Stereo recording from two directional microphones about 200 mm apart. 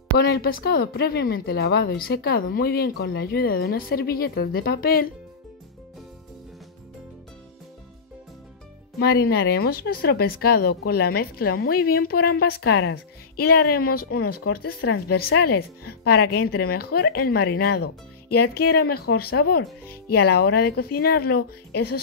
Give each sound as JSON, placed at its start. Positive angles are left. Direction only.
{"t": 0.2, "sound": "a woman's voice", "side_deg": 50}
{"t": 9.0, "sound": "a woman's voice", "side_deg": 50}